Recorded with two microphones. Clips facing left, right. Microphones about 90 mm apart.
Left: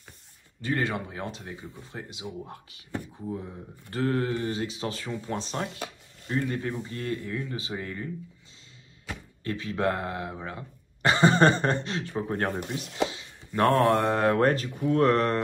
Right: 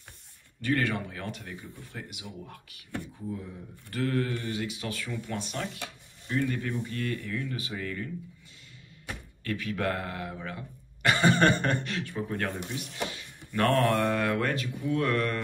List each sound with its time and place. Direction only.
0.6 s speech: 20° left (ahead or behind)
9.1 s speech: 25° left (ahead or behind)
12.4 s speech: 55° left (ahead or behind)
12.9 s chopping: 20° left (ahead or behind)
13.5 s speech: 20° left (ahead or behind); by 15.3 s 35° left (ahead or behind)